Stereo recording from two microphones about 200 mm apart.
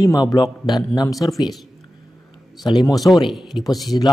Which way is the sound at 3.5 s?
25° left (ahead or behind).